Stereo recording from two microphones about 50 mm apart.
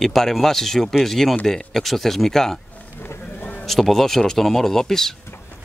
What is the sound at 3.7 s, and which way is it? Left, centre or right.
Speech, centre.